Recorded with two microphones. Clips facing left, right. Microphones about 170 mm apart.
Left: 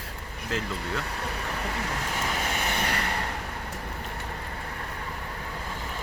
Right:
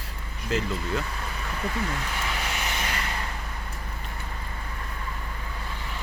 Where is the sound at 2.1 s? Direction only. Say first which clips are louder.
Left 2 dB; 45° left (ahead or behind); by 3.2 s 65° left (ahead or behind).